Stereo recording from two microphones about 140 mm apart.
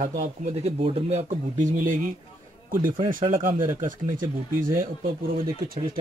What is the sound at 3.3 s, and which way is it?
Speech, 75° right (ahead or behind).